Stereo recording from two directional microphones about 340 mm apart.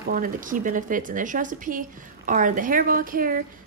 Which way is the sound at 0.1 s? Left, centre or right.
Right.